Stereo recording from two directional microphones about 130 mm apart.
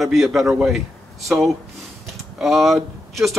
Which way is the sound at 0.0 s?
Centre (ahead or behind).